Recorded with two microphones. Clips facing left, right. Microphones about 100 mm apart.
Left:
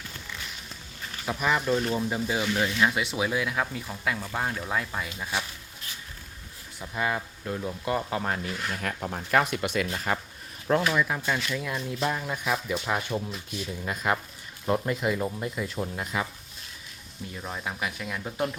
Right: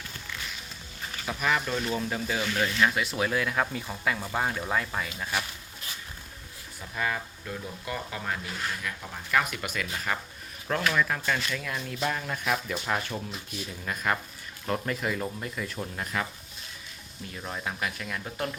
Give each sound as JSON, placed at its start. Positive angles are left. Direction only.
{"t": 1.2, "sound": "speech", "side_deg": 15}
{"t": 3.2, "sound": "speech", "side_deg": 10}
{"t": 5.0, "sound": "speech", "side_deg": 15}
{"t": 6.7, "sound": "speech", "side_deg": 20}
{"t": 9.4, "sound": "speech", "side_deg": 30}
{"t": 17.3, "sound": "speech", "side_deg": 0}